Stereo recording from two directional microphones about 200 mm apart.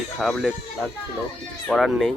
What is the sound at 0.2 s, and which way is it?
Speech, centre (ahead or behind).